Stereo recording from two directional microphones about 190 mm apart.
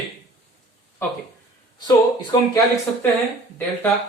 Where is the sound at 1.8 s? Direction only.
20° left (ahead or behind).